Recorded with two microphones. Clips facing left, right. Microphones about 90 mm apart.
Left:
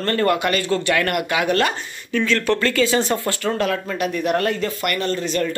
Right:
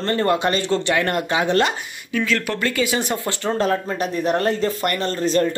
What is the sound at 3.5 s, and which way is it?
Speech, 30° right (ahead or behind).